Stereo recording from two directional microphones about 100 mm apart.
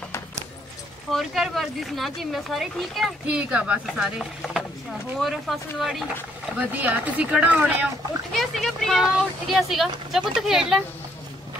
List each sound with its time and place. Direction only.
1.1 s speech: centre (ahead or behind)
3.3 s speech: 10° right (ahead or behind)
3.8 s speech: centre (ahead or behind)
6.6 s speech: 15° right (ahead or behind)
8.3 s speech: centre (ahead or behind)